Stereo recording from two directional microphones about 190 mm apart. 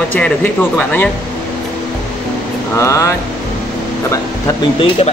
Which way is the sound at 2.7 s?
15° left (ahead or behind).